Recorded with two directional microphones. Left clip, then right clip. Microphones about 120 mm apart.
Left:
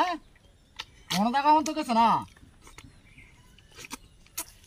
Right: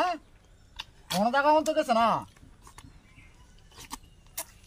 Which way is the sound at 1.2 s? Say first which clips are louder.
Even; 40° right (ahead or behind).